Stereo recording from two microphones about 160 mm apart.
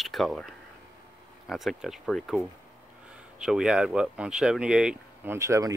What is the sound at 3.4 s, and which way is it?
Speech, 5° right (ahead or behind).